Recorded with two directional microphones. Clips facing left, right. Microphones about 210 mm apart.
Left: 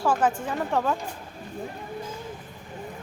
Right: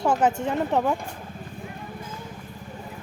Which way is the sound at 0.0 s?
20° right (ahead or behind).